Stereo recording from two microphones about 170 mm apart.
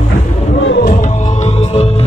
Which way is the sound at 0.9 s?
45° left (ahead or behind).